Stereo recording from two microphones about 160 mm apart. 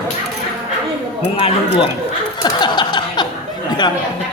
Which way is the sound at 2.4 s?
25° left (ahead or behind).